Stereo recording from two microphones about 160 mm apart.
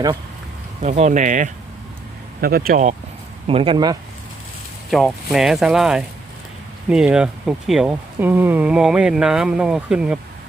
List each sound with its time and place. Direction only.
0.8 s speech: 45° right (ahead or behind)
2.4 s speech: 70° right (ahead or behind)
3.4 s speech: 35° right (ahead or behind)
4.9 s speech: centre (ahead or behind)